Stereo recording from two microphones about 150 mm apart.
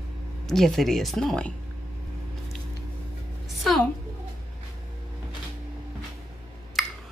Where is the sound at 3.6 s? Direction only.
Centre (ahead or behind).